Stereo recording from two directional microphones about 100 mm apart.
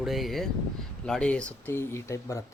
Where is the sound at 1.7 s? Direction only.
25° left (ahead or behind).